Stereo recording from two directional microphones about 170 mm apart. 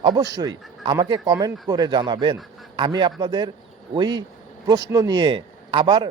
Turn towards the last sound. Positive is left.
turn(degrees=-25)  # may be behind; listen again after turning